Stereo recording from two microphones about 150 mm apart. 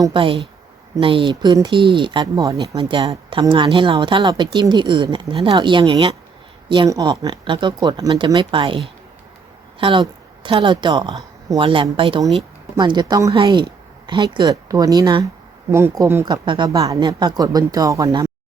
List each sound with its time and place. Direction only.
0.0 s a woman's voice: 35° right (ahead or behind)
2.2 s speech: 20° right (ahead or behind)
2.6 s a woman's voice: 40° right (ahead or behind)
6.8 s speech: 25° right (ahead or behind)
10.4 s a woman's voice: 35° right (ahead or behind); by 16.2 s 15° right (ahead or behind)
16.2 s speech: 30° right (ahead or behind)